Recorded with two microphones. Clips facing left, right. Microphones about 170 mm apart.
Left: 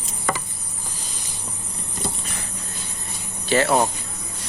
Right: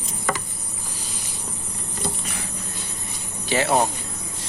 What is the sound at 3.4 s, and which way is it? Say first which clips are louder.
Speech: left 3 dB; 15° right (ahead or behind).